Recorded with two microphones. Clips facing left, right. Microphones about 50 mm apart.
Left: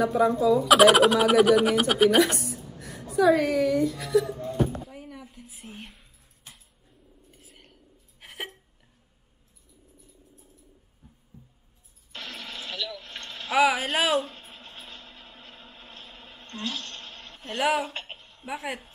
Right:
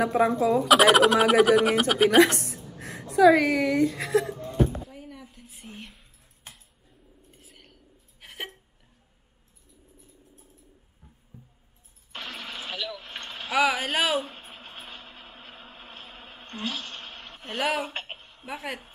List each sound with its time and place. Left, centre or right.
0.0 s speech: right
0.7 s speech: centre
2.0 s a woman's voice: right
4.8 s a sound: centre
7.2 s a sound: centre
11.3 s keys jangling: right
12.1 s a sound: right
13.5 s speech: centre
14.1 s vehicle: centre
17.6 s speech: centre
17.8 s a sound: right
18.4 s speech: centre